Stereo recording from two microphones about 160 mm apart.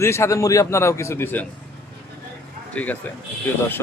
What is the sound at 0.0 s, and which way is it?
Speech, 15° left (ahead or behind).